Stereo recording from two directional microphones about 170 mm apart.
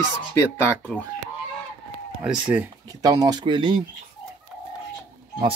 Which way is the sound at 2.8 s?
20° right (ahead or behind).